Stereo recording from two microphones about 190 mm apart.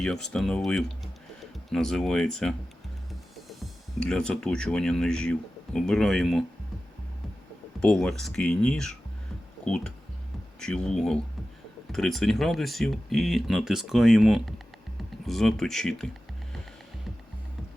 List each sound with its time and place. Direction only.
0.0 s speech: 5° left (ahead or behind)
4.0 s speech: 5° left (ahead or behind)
7.8 s speech: centre (ahead or behind)